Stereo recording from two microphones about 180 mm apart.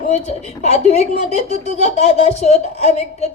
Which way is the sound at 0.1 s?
40° left (ahead or behind).